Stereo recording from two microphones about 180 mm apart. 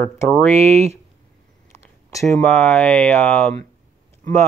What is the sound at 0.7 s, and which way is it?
Speech, 35° right (ahead or behind).